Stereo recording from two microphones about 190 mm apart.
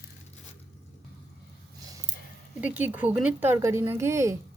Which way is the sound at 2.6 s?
10° right (ahead or behind).